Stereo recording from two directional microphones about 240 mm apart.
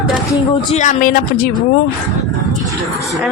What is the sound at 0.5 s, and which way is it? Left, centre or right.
Speech, left.